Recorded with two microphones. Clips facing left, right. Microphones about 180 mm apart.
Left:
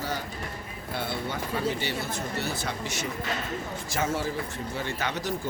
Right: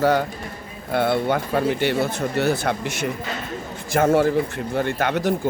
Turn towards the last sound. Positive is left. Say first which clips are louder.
# right 9 dB
turn(degrees=-55)  # may be behind; listen again after turning